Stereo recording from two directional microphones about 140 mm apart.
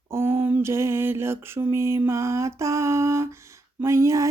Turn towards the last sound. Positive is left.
turn(degrees=-20)  # may be behind; listen again after turning